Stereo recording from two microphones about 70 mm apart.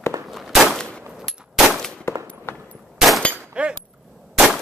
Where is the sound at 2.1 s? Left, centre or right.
Left.